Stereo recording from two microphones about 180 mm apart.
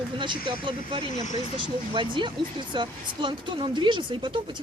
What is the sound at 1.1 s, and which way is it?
Speech, 40° left (ahead or behind).